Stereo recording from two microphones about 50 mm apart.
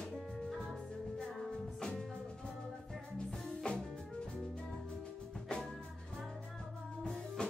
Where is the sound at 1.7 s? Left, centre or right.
Centre.